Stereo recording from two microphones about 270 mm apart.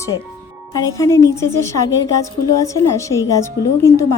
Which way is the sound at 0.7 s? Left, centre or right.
Centre.